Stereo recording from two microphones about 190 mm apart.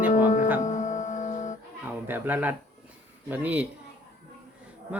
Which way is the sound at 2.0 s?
10° right (ahead or behind).